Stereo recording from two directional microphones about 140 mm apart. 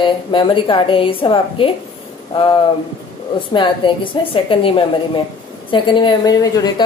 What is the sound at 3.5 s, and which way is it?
A woman's voice, 35° left (ahead or behind).